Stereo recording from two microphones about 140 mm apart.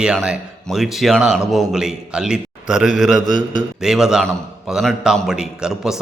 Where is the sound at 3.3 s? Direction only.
65° left (ahead or behind).